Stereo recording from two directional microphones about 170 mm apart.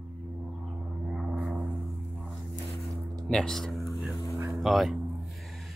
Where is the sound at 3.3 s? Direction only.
5° left (ahead or behind).